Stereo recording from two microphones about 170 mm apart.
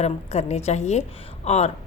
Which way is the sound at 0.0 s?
40° left (ahead or behind).